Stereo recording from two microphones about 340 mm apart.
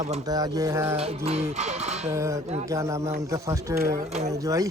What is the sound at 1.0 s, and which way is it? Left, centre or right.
Music, centre.